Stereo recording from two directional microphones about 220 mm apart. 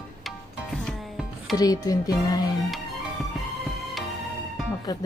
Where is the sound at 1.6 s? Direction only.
15° left (ahead or behind).